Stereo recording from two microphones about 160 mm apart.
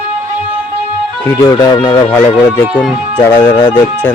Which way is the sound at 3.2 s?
10° left (ahead or behind).